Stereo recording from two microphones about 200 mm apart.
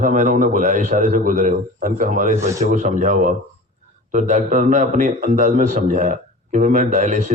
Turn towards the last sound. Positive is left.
turn(degrees=-40)  # may be behind; listen again after turning